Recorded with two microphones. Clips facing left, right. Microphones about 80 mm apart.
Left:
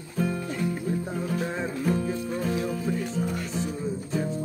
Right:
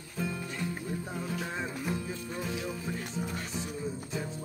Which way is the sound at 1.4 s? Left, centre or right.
Left.